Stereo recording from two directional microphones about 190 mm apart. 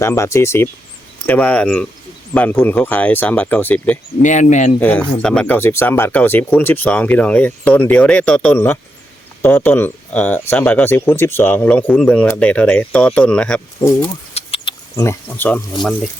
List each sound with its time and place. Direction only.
0.0 s speech: 15° left (ahead or behind)
4.2 s speech: 40° left (ahead or behind)
4.8 s speech: 10° left (ahead or behind)
14.3 s a sound: 30° left (ahead or behind)
14.9 s speech: 15° left (ahead or behind)